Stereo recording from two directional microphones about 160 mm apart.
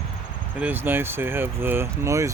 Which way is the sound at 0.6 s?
15° right (ahead or behind).